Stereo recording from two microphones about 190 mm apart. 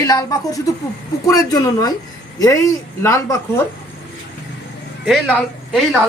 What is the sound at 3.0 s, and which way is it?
Speech, 15° left (ahead or behind).